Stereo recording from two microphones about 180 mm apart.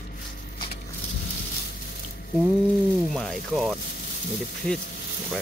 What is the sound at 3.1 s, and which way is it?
Speech, centre (ahead or behind).